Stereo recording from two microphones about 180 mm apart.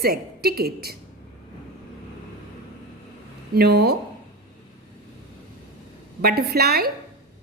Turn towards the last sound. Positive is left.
turn(degrees=-60)  # may be behind; listen again after turning